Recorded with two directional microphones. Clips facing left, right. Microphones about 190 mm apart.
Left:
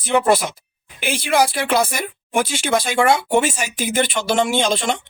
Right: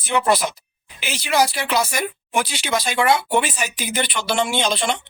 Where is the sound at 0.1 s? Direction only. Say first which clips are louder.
Left 3 dB; 50° left (ahead or behind).